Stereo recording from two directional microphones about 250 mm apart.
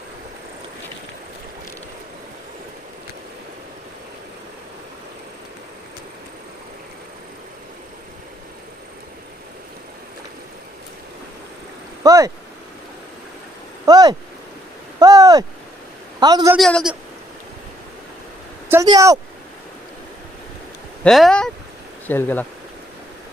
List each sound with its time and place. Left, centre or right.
12.0 s a sound: centre
13.8 s a sound: centre
16.2 s speech: centre
16.5 s a man's voice: centre
18.7 s speech: centre
21.0 s speech: centre